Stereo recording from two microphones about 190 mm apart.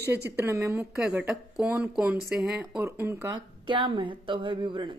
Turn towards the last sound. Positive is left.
turn(degrees=-25)  # may be behind; listen again after turning